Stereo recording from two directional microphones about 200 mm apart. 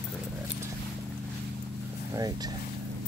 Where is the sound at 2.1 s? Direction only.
20° right (ahead or behind).